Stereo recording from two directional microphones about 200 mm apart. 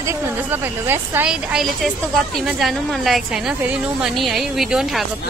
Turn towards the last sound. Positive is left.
turn(degrees=0)  # may be behind; listen again after turning